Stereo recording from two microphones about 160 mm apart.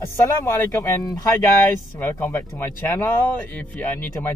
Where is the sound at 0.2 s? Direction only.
20° left (ahead or behind).